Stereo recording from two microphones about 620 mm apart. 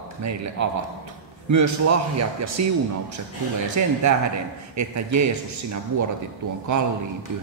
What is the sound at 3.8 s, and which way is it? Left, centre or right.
A man's voice, right.